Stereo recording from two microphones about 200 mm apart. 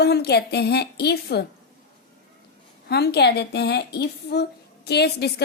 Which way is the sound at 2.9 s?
55° left (ahead or behind).